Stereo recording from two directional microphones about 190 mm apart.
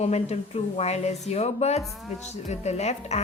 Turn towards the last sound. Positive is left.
turn(degrees=35)  # may be behind; listen again after turning